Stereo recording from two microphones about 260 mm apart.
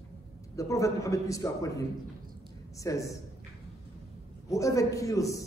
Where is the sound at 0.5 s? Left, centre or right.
Centre.